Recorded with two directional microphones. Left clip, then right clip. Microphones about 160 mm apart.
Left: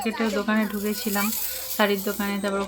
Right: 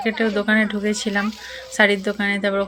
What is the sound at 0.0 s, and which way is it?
Speech, 15° right (ahead or behind).